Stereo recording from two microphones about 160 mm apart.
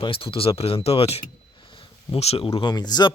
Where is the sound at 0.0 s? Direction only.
35° left (ahead or behind).